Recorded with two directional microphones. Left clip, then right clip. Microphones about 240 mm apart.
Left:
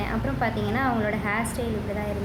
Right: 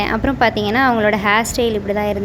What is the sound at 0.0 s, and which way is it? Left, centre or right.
A woman's voice, right.